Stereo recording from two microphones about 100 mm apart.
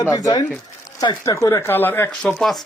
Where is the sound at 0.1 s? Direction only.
40° left (ahead or behind).